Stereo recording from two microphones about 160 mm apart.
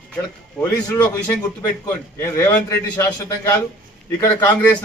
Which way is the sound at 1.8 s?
15° left (ahead or behind).